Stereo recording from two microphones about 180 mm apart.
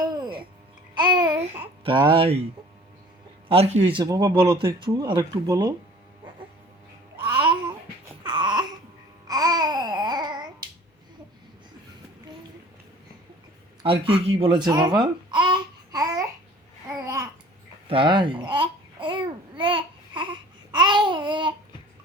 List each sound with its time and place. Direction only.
0.0 s a sound: 20° right (ahead or behind)
0.9 s babbling: 25° right (ahead or behind)
1.8 s speech: 25° right (ahead or behind)
3.5 s speech: 35° right (ahead or behind)
8.2 s a sound: 25° right (ahead or behind)
9.2 s babbling: 20° right (ahead or behind)
13.8 s babbling: 30° right (ahead or behind)